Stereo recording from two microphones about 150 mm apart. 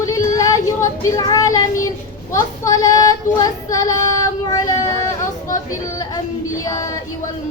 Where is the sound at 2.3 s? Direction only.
25° left (ahead or behind).